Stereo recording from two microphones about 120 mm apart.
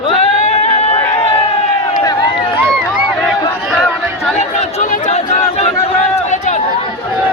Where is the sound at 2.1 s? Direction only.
35° left (ahead or behind).